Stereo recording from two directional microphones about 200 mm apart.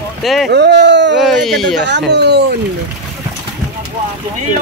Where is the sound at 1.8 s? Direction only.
60° right (ahead or behind).